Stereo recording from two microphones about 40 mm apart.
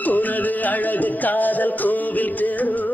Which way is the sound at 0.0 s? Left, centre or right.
Left.